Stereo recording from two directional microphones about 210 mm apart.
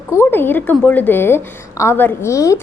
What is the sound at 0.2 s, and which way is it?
A woman's voice, 10° left (ahead or behind).